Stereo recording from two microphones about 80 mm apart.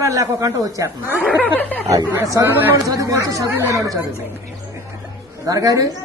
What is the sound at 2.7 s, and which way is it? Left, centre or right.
A woman's voice, right.